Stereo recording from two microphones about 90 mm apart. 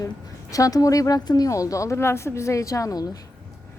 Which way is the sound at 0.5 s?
40° left (ahead or behind).